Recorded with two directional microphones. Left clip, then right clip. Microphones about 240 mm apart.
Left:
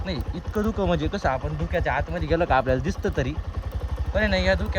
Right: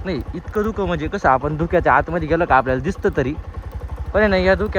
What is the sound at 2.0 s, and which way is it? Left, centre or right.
Speech, centre.